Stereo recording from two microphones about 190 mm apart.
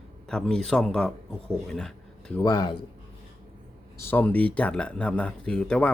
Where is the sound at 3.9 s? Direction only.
10° left (ahead or behind).